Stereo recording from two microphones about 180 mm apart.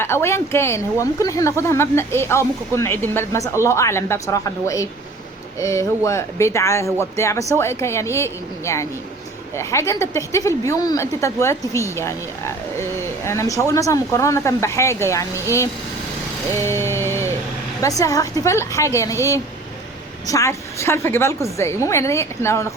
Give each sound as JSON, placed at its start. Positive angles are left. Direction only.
{"t": 0.0, "sound": "speech", "side_deg": 15}
{"t": 16.5, "sound": "a sound", "side_deg": 15}
{"t": 17.7, "sound": "speech", "side_deg": 20}